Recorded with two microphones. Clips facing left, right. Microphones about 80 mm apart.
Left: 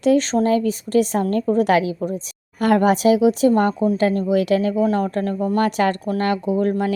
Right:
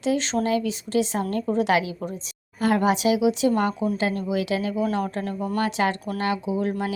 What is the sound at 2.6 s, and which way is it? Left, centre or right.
A woman's voice, left.